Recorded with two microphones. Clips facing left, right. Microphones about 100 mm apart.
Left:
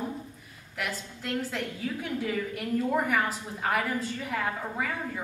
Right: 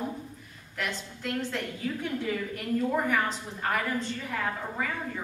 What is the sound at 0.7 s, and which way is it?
A woman's voice, 5° left (ahead or behind).